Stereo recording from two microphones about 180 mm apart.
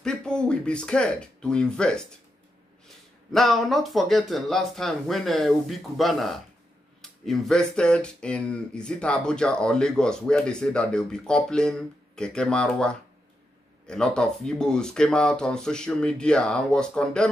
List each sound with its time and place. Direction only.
0.0 s speech: 5° left (ahead or behind)
3.3 s speech: centre (ahead or behind)